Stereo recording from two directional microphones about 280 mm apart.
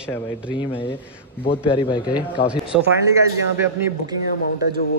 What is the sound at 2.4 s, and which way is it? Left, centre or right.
Speech, centre.